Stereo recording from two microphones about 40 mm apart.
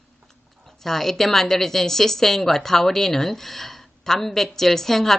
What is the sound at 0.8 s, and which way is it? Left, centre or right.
A woman's voice, centre.